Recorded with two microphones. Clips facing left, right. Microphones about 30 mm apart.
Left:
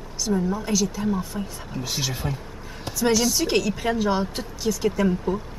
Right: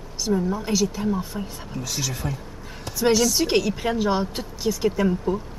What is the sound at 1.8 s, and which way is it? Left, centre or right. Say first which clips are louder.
Speech: left 1 dB; centre.